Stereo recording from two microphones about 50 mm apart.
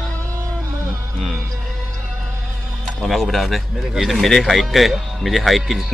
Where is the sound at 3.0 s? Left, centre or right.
Centre.